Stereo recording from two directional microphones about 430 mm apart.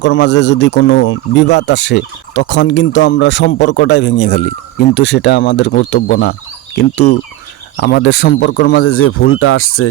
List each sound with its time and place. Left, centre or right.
0.0 s speech: left